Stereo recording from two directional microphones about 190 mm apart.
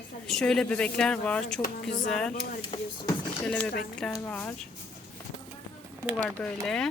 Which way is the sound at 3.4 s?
5° left (ahead or behind).